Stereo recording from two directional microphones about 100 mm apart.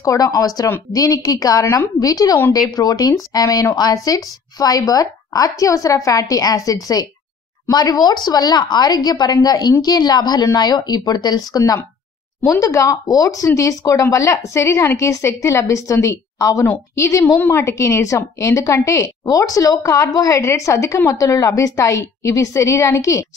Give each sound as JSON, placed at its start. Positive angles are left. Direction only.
{"t": 0.0, "sound": "a woman's voice", "side_deg": 35}